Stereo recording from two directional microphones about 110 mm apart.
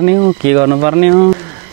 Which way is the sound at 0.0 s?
30° right (ahead or behind).